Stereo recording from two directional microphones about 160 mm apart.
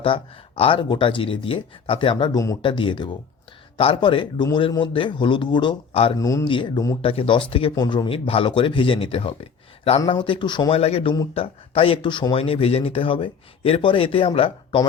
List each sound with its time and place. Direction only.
0.0 s speech: 35° left (ahead or behind)
2.6 s speech: 30° left (ahead or behind)
6.1 s speech: 20° left (ahead or behind)